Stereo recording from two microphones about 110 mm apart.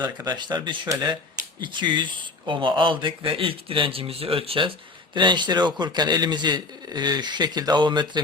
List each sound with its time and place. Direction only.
0.3 s a man's voice: 40° right (ahead or behind)
5.1 s a man's voice: 45° right (ahead or behind)